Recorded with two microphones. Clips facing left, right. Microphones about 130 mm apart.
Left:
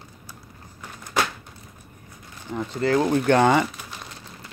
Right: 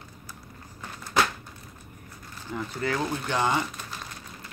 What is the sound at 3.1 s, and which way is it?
Speech, 60° left (ahead or behind).